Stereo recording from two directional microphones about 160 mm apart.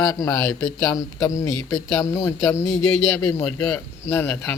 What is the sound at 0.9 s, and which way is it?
Speech, 20° left (ahead or behind).